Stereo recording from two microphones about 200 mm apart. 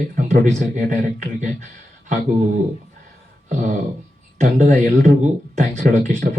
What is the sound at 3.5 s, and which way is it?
Speech, 35° right (ahead or behind).